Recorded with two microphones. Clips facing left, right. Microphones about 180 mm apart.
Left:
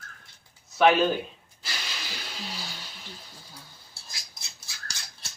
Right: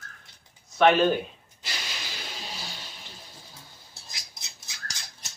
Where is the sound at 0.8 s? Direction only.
Centre (ahead or behind).